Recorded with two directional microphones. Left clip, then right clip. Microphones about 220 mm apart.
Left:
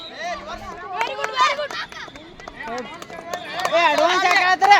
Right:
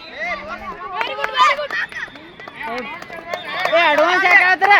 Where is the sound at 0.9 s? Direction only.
40° right (ahead or behind).